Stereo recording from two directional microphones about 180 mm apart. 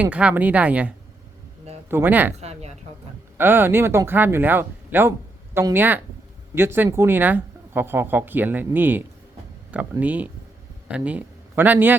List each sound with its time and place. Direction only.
0.0 s speech: 5° right (ahead or behind)
2.4 s a woman's voice: 35° right (ahead or behind)
3.3 s a man's voice: 10° right (ahead or behind)